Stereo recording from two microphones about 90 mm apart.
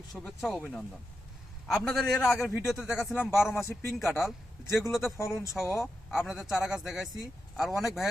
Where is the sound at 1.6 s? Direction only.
5° left (ahead or behind).